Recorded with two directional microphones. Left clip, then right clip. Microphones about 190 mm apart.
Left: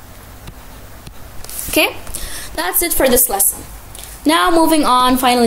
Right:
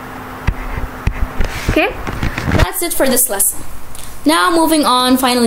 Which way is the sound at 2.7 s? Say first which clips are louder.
Left 1 dB; 10° left (ahead or behind).